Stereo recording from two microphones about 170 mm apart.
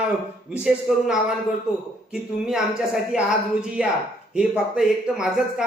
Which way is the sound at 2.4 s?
5° right (ahead or behind).